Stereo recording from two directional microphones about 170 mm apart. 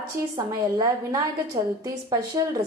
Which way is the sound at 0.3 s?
20° right (ahead or behind).